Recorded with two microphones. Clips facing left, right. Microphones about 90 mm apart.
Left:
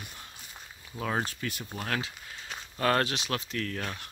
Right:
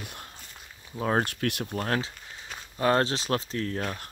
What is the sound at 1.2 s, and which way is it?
Speech, 65° right (ahead or behind).